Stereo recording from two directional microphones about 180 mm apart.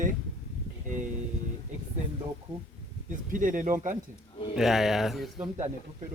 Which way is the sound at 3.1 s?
45° right (ahead or behind).